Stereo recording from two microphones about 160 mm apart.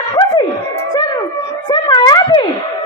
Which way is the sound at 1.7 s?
25° left (ahead or behind).